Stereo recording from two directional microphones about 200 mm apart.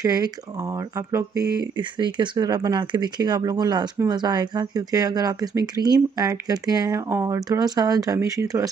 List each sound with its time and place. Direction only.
0.0 s speech: 20° right (ahead or behind)